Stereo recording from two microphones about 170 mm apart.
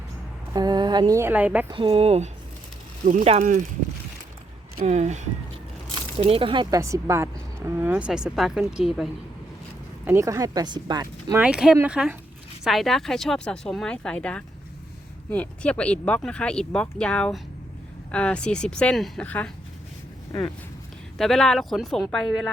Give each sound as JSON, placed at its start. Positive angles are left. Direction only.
{"t": 0.5, "sound": "speech", "side_deg": -25}
{"t": 1.7, "sound": "speech", "side_deg": -35}
{"t": 4.9, "sound": "speech", "side_deg": -40}
{"t": 10.1, "sound": "speech", "side_deg": -20}
{"t": 11.3, "sound": "speech", "side_deg": -5}
{"t": 21.2, "sound": "speech", "side_deg": 5}